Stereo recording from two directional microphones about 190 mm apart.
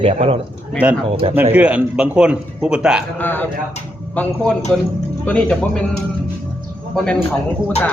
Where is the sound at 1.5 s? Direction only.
5° right (ahead or behind).